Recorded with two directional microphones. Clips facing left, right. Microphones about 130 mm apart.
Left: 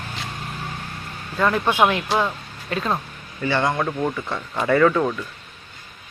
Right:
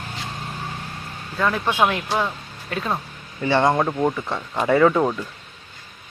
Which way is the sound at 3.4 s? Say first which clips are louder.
Right 3 dB; 25° right (ahead or behind).